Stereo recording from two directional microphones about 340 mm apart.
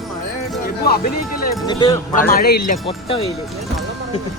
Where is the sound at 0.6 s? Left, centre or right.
Left.